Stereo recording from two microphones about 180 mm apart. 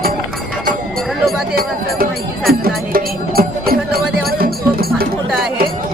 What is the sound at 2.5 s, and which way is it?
Music, 55° right (ahead or behind).